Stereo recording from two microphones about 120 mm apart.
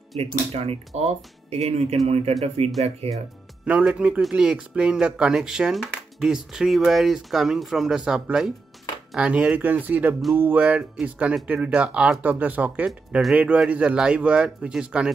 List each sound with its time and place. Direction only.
0.2 s speech: 60° right (ahead or behind)
3.6 s speech: 10° right (ahead or behind)